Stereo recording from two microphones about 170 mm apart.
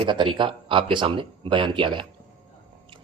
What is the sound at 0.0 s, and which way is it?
Speech, 30° right (ahead or behind).